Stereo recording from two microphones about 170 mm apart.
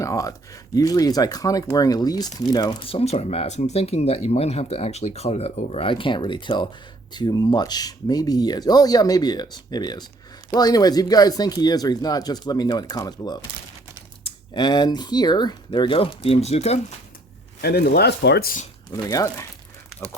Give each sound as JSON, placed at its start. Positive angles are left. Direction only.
{"t": 0.0, "sound": "speech", "side_deg": 20}
{"t": 17.6, "sound": "speech", "side_deg": 70}
{"t": 18.9, "sound": "speech", "side_deg": 15}